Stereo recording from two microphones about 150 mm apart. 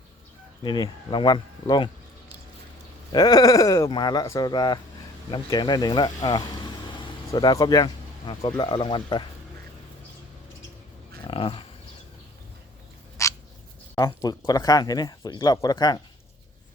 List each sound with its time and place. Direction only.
0.6 s speech: 30° left (ahead or behind)
3.1 s speech: 25° left (ahead or behind)
11.2 s dog: 35° left (ahead or behind)
13.2 s dog: 20° left (ahead or behind)
13.9 s speech: 25° left (ahead or behind)